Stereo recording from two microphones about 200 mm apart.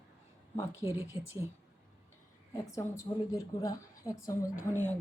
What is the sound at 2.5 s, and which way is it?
A woman's voice, 15° left (ahead or behind).